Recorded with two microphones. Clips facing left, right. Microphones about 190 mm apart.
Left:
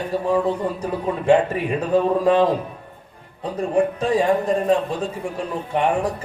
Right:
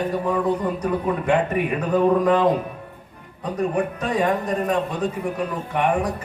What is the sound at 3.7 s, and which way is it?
Speech, 30° left (ahead or behind).